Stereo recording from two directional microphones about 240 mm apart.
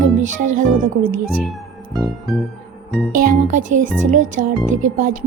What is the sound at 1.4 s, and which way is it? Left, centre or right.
Music, centre.